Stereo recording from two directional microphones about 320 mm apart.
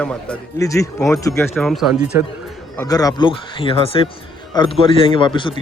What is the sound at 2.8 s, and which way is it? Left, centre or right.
Speech, centre.